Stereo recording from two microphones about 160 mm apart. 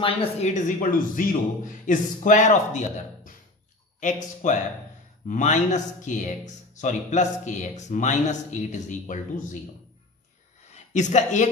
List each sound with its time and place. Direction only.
0.0 s speech: 40° left (ahead or behind)
10.7 s speech: 45° left (ahead or behind)